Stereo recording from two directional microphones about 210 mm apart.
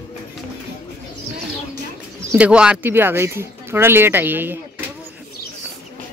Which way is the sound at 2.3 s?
5° right (ahead or behind).